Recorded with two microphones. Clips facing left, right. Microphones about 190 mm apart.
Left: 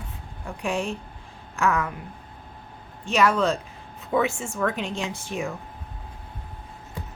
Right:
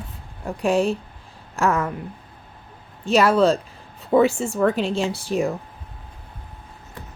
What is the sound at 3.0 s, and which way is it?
Speech, 35° right (ahead or behind).